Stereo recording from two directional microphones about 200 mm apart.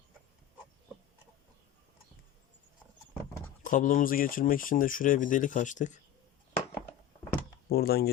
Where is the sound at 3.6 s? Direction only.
40° left (ahead or behind).